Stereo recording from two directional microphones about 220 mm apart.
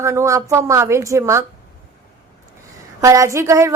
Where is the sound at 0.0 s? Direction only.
15° right (ahead or behind).